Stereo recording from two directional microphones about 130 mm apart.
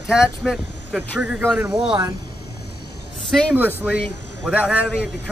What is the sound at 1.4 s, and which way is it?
Speech, 20° right (ahead or behind).